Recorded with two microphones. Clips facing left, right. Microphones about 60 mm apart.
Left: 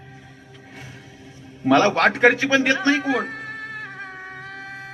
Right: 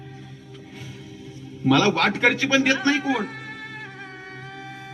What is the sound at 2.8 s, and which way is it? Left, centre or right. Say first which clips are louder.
Music: left 2 dB; left.